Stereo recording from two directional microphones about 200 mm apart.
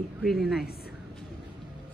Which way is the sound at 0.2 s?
Centre (ahead or behind).